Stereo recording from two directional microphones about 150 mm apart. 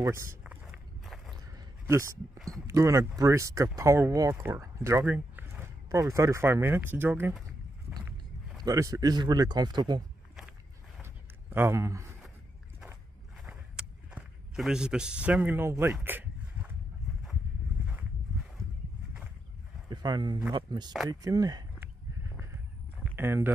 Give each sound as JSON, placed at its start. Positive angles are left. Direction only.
{"t": 0.0, "sound": "walk", "side_deg": -15}
{"t": 1.9, "sound": "speech", "side_deg": -20}
{"t": 2.3, "sound": "speech", "side_deg": 0}
{"t": 2.6, "sound": "speech", "side_deg": -20}
{"t": 8.6, "sound": "speech", "side_deg": -20}
{"t": 11.5, "sound": "speech", "side_deg": -15}
{"t": 13.4, "sound": "a sound", "side_deg": -5}
{"t": 19.9, "sound": "speech", "side_deg": -30}
{"t": 23.1, "sound": "speech", "side_deg": -15}